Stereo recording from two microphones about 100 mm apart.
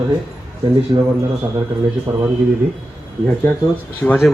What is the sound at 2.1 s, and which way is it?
Speech, 30° right (ahead or behind).